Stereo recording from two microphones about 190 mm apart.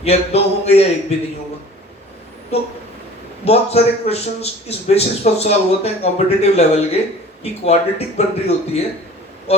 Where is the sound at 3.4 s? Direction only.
35° left (ahead or behind).